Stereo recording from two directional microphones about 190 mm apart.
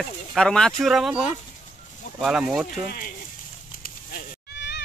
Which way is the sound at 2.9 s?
50° left (ahead or behind).